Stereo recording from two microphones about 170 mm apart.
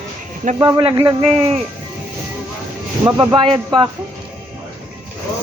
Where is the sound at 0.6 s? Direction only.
20° right (ahead or behind).